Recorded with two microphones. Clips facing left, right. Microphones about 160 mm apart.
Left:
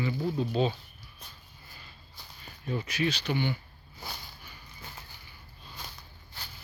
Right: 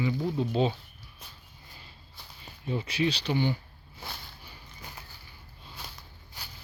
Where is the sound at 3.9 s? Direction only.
Centre (ahead or behind).